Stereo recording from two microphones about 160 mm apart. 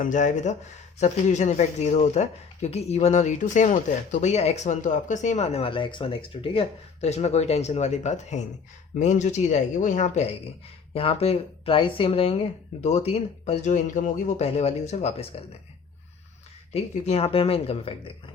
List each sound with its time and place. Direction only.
0.0 s speech: 50° left (ahead or behind)
10.9 s speech: 35° left (ahead or behind)
16.7 s speech: 40° left (ahead or behind)